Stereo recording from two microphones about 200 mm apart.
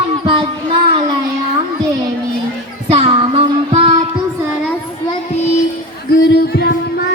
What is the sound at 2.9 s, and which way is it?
Child singing, 25° right (ahead or behind).